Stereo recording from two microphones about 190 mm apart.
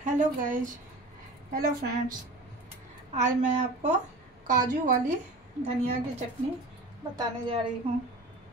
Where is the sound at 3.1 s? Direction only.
40° right (ahead or behind).